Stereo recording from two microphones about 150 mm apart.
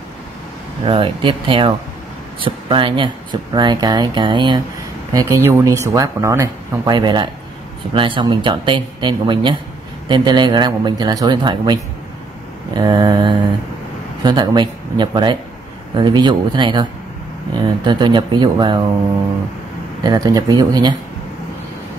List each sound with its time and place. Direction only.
0.8 s speech: 35° right (ahead or behind)
5.1 s speech: 20° right (ahead or behind)
17.8 s speech: 30° right (ahead or behind)
20.0 s speech: 25° right (ahead or behind)